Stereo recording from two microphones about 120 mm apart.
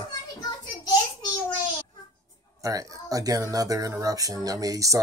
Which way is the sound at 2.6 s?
30° right (ahead or behind).